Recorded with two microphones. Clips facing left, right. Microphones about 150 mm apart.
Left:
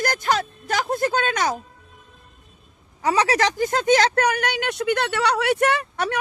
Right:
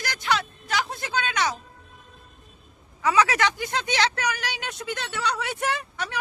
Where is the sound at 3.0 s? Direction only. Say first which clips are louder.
Left 2 dB; 35° left (ahead or behind).